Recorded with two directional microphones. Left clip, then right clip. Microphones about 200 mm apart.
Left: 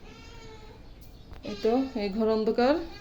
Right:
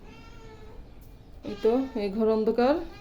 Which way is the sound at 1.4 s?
Centre (ahead or behind).